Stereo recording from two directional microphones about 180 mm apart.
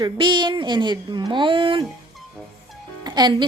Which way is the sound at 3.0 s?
25° right (ahead or behind).